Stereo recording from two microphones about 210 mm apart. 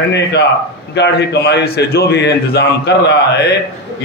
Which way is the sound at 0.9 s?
55° left (ahead or behind).